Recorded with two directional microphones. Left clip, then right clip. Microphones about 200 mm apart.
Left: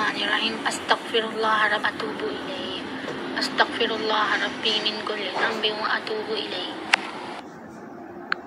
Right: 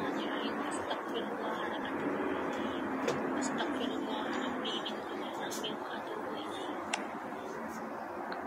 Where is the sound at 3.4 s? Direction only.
40° left (ahead or behind).